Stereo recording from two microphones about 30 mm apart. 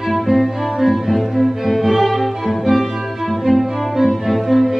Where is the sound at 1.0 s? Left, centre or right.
Centre.